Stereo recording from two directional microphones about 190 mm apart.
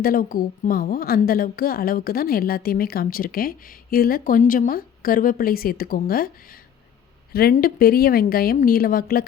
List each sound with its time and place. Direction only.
0.0 s a woman's voice: 50° left (ahead or behind)